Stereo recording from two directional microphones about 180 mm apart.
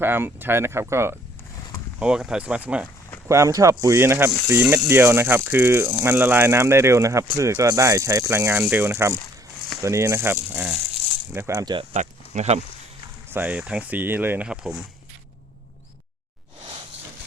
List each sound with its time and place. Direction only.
0.0 s speech: 10° right (ahead or behind)
2.0 s speech: 5° right (ahead or behind)
11.3 s speech: 15° right (ahead or behind)
11.9 s speech: 40° right (ahead or behind)
13.3 s speech: 10° right (ahead or behind)